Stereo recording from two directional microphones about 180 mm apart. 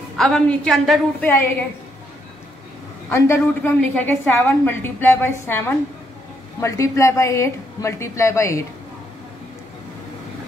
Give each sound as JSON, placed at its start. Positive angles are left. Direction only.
{"t": 0.2, "sound": "a woman's voice", "side_deg": 5}
{"t": 3.1, "sound": "a woman's voice", "side_deg": 15}